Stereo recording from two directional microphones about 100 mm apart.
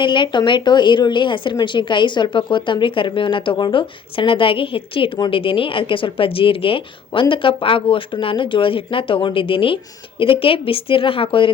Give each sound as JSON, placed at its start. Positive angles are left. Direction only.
{"t": 0.0, "sound": "a woman's voice", "side_deg": 55}